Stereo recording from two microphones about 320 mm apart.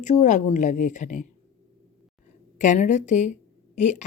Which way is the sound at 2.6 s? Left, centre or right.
Left.